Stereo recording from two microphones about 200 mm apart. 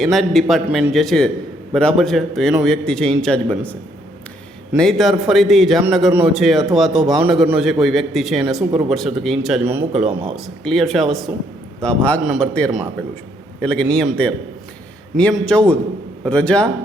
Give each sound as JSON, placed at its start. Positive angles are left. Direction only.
{"t": 0.0, "sound": "a man's voice", "side_deg": 0}